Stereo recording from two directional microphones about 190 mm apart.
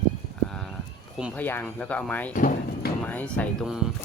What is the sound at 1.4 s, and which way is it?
Speech, 10° left (ahead or behind).